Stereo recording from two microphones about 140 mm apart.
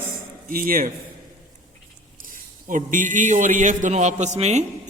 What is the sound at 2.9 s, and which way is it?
A man's voice, 70° right (ahead or behind).